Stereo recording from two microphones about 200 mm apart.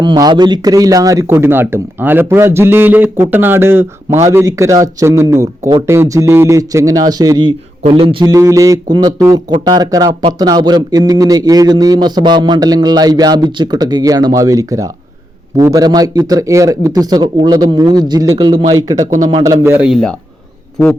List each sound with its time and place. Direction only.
0.0 s speech: 20° right (ahead or behind); by 20.1 s centre (ahead or behind)